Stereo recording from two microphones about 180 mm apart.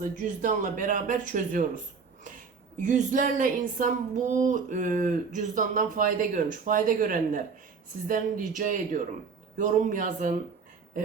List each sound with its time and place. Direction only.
0.0 s speech: 45° right (ahead or behind)
2.8 s speech: 45° right (ahead or behind)